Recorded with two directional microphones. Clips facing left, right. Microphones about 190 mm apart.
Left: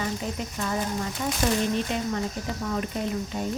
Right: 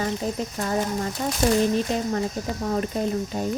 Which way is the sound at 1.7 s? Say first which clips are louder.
Right 3 dB; 40° right (ahead or behind).